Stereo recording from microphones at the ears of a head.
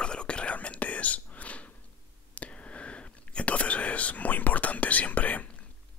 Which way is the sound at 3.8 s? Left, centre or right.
Left.